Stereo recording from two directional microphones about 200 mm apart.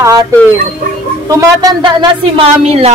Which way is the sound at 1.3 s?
15° right (ahead or behind).